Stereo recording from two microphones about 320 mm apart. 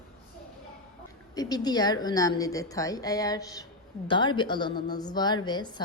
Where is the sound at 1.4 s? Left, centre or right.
Centre.